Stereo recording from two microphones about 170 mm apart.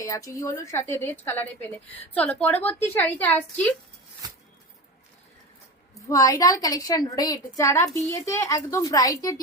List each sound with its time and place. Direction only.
0.0 s a woman's voice: 15° left (ahead or behind)
5.9 s a woman's voice: 20° left (ahead or behind)